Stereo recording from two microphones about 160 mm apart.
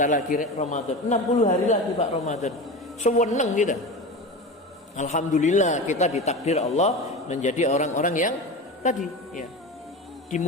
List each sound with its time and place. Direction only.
0.0 s a man's voice: 55° left (ahead or behind)
4.9 s a man's voice: 50° left (ahead or behind)